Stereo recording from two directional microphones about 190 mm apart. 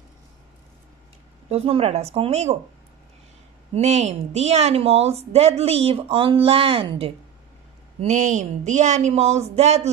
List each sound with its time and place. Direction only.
1.5 s speech: 30° right (ahead or behind)
3.7 s speech: 35° right (ahead or behind)
8.0 s speech: 40° right (ahead or behind)